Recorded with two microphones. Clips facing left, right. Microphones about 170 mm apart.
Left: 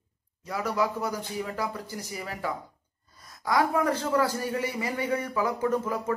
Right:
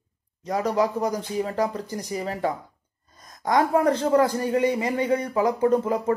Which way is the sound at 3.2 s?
40° right (ahead or behind).